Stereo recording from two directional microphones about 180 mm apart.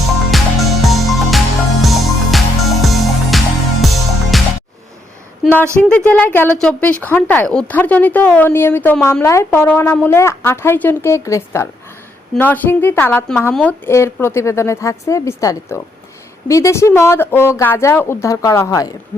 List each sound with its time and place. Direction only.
0.3 s music: centre (ahead or behind)
5.4 s a woman's voice: centre (ahead or behind); by 18.9 s 20° left (ahead or behind)